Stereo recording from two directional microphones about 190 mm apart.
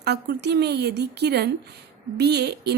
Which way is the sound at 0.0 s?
60° right (ahead or behind).